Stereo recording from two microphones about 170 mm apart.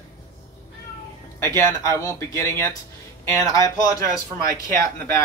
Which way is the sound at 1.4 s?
20° left (ahead or behind).